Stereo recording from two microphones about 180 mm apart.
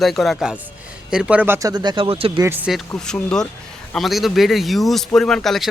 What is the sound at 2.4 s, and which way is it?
Speech, 10° right (ahead or behind).